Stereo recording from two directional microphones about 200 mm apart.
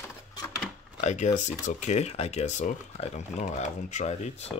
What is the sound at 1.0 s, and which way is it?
Speech, 35° left (ahead or behind).